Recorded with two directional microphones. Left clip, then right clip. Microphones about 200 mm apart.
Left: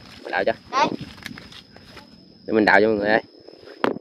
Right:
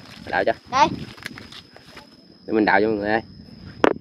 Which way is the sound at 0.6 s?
55° right (ahead or behind).